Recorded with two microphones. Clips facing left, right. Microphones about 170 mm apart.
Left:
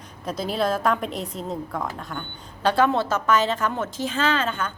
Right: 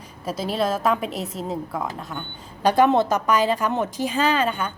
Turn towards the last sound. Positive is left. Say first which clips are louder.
# right 2 dB
turn(degrees=-10)  # may be behind; listen again after turning